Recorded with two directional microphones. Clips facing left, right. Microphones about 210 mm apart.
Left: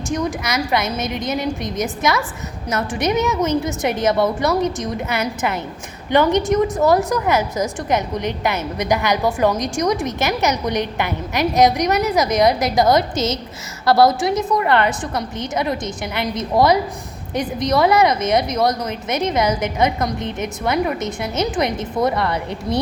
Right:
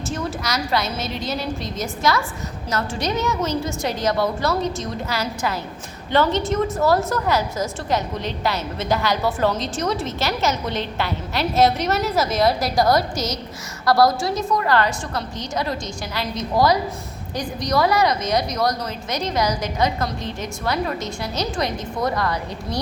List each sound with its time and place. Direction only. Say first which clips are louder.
0.1 s a woman's voice: left 5 dB; 15° left (ahead or behind)